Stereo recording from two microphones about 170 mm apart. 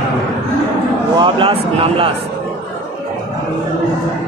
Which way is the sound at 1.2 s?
30° right (ahead or behind).